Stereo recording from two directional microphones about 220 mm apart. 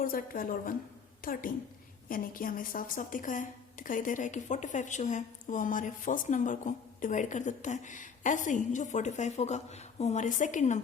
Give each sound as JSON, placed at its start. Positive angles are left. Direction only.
{"t": 0.0, "sound": "a woman's voice", "side_deg": 40}